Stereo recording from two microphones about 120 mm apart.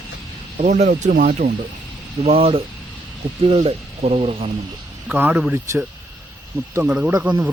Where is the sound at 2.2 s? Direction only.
55° right (ahead or behind).